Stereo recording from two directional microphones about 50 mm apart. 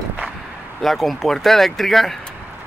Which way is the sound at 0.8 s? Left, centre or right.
Centre.